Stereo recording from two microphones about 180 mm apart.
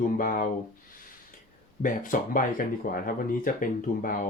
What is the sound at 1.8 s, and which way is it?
Speech, 50° left (ahead or behind).